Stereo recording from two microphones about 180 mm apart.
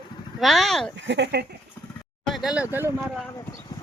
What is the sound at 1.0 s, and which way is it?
Speech, 75° right (ahead or behind).